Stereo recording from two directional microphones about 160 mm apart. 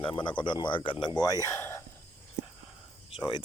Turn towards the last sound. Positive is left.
turn(degrees=30)  # may be behind; listen again after turning